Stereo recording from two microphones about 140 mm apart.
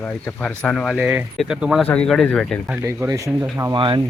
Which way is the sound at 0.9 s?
10° right (ahead or behind).